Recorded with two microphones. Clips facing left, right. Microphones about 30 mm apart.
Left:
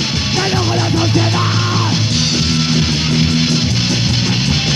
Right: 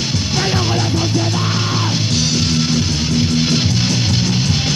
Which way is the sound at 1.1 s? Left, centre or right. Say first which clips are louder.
Left 3 dB; left.